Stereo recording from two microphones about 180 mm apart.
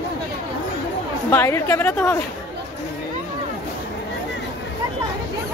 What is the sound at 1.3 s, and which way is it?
Speech, 15° left (ahead or behind).